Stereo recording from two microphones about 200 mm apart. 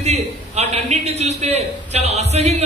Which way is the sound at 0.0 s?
35° right (ahead or behind).